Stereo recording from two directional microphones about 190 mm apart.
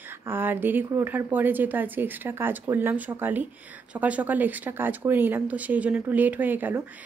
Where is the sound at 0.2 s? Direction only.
10° right (ahead or behind).